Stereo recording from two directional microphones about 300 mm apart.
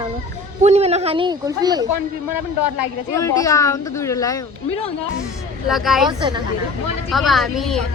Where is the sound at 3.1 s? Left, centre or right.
Centre.